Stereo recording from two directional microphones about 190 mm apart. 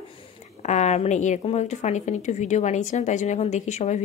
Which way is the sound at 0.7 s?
35° left (ahead or behind).